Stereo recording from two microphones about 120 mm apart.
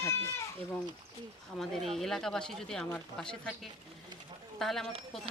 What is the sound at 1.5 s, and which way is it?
Speech, centre (ahead or behind).